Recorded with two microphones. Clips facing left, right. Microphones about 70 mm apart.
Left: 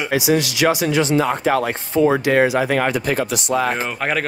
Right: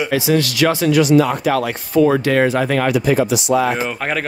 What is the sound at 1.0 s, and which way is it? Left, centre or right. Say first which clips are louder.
Speech: right 4 dB; left.